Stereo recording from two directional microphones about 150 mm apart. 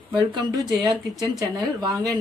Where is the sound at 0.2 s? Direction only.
30° right (ahead or behind).